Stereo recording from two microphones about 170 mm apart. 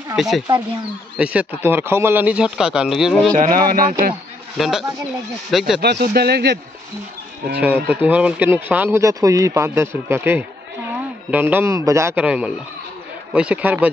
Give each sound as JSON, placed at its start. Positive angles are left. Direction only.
{"t": 0.1, "sound": "speech", "side_deg": 0}
{"t": 3.3, "sound": "speech", "side_deg": -55}
{"t": 4.6, "sound": "speech", "side_deg": 0}
{"t": 5.8, "sound": "a man's voice", "side_deg": -70}
{"t": 7.6, "sound": "speech", "side_deg": -10}